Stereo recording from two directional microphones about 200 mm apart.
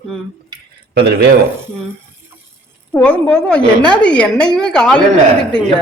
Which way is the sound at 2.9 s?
5° left (ahead or behind).